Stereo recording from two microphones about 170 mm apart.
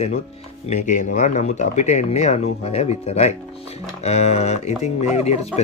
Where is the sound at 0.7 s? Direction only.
45° left (ahead or behind).